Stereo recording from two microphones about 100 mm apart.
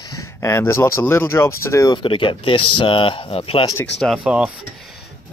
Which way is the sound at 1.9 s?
55° left (ahead or behind).